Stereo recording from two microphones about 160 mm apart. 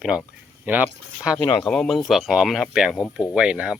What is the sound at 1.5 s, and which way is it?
Speech, 5° left (ahead or behind).